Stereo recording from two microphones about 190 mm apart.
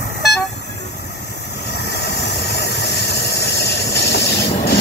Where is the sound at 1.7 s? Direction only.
60° left (ahead or behind).